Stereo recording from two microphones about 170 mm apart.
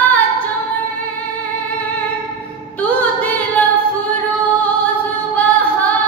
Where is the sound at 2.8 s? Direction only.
10° left (ahead or behind).